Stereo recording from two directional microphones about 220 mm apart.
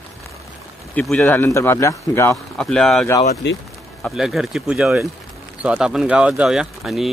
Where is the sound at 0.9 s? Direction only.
5° left (ahead or behind).